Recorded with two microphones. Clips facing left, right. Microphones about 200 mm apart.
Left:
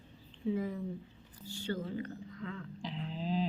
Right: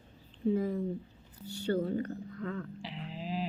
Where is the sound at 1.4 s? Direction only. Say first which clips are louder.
Right 7 dB; 65° right (ahead or behind).